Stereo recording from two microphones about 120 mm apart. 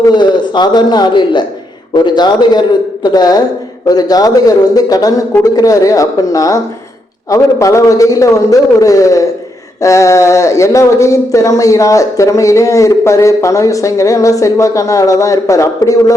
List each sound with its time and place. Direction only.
0.1 s a man's voice: 40° left (ahead or behind)